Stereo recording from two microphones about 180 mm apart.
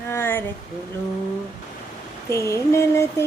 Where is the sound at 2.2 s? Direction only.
15° left (ahead or behind).